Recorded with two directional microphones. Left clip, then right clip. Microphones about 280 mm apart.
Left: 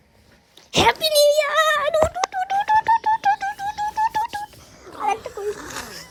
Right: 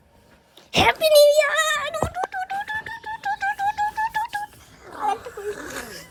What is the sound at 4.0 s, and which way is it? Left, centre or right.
Telephone dialing, left.